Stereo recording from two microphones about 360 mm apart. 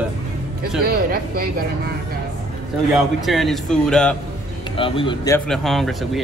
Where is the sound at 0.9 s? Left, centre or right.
Right.